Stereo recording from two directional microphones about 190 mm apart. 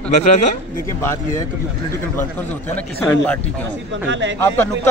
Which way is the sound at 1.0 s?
15° left (ahead or behind).